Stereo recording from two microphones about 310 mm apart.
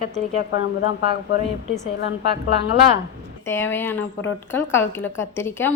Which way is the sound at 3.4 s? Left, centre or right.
Centre.